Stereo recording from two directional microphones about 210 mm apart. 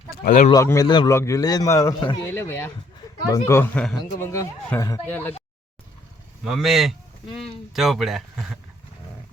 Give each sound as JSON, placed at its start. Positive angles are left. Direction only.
{"t": 0.3, "sound": "speech", "side_deg": 40}
{"t": 0.5, "sound": "a man's voice", "side_deg": 15}
{"t": 4.3, "sound": "a man's voice", "side_deg": 15}
{"t": 6.4, "sound": "speech", "side_deg": 0}